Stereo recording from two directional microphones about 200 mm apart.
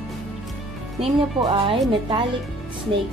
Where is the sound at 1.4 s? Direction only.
25° right (ahead or behind).